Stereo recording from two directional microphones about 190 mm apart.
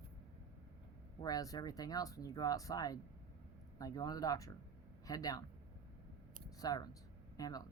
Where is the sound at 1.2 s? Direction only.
20° left (ahead or behind).